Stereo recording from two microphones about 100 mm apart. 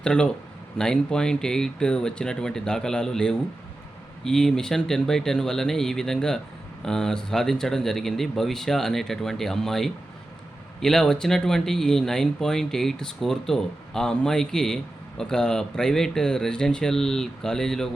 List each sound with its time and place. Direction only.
0.0 s speech: 10° left (ahead or behind)